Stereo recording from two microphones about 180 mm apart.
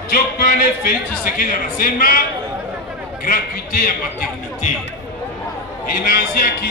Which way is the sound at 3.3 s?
55° left (ahead or behind).